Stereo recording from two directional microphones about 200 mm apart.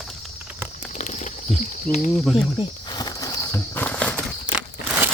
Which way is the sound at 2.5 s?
20° left (ahead or behind).